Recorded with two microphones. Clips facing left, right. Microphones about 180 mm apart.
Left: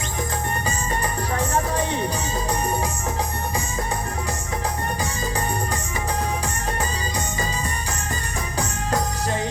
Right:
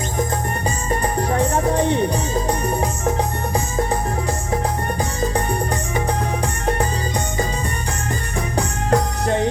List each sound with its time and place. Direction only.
8.5 s music: 60° right (ahead or behind)